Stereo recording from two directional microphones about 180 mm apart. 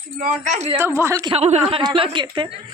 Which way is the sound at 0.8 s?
15° right (ahead or behind).